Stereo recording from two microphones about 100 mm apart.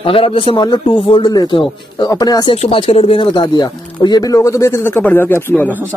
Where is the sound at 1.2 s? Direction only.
45° left (ahead or behind).